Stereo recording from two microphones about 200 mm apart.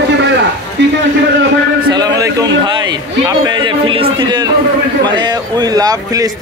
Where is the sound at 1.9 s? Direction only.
20° right (ahead or behind).